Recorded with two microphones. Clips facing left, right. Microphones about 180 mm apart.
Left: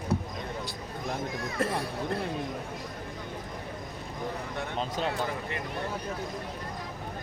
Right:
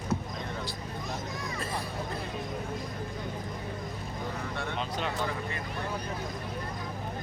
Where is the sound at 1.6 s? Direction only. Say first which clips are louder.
Left 8 dB; 65° left (ahead or behind).